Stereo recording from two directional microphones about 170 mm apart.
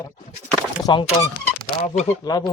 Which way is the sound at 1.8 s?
40° left (ahead or behind).